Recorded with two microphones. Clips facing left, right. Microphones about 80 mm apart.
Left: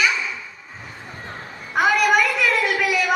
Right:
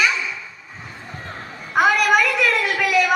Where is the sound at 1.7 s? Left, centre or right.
Centre.